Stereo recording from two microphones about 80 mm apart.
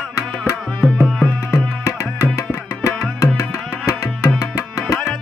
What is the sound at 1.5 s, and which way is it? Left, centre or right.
Tabla, left.